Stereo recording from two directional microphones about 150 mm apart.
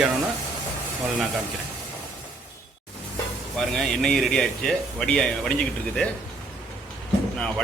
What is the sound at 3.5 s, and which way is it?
Speech, centre (ahead or behind).